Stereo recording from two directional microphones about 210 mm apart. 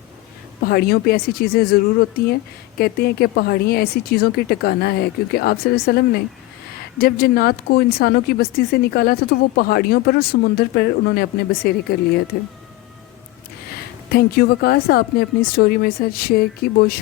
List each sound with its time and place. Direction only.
0.6 s speech: 45° left (ahead or behind)
14.1 s speech: 50° left (ahead or behind)